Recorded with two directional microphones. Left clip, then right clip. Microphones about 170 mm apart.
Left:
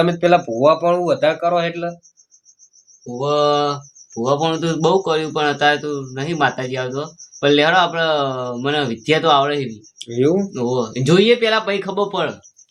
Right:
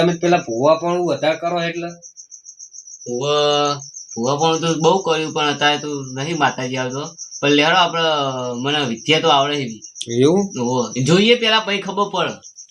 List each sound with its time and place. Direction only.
0.0 s speech: 15° left (ahead or behind)
3.2 s mantra: 55° left (ahead or behind)
4.1 s speech: 15° left (ahead or behind)
10.0 s speech: 45° right (ahead or behind)
10.5 s speech: 10° left (ahead or behind)